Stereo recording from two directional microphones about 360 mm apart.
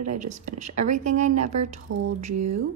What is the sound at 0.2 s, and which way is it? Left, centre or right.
Speech, centre.